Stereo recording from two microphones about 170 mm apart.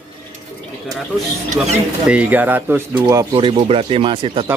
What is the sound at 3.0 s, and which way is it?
Speech, 25° right (ahead or behind).